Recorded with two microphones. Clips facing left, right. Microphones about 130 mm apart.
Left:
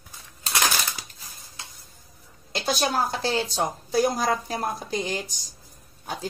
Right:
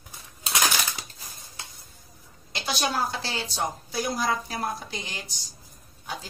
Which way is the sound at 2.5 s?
40° left (ahead or behind).